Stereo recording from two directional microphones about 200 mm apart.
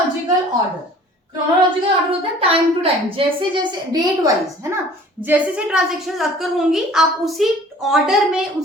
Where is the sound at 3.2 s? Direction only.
25° right (ahead or behind).